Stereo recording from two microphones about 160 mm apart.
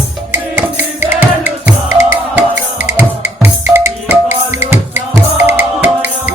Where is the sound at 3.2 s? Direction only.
15° right (ahead or behind).